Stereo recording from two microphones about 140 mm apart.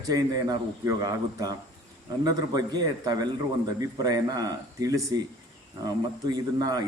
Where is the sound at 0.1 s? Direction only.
30° right (ahead or behind).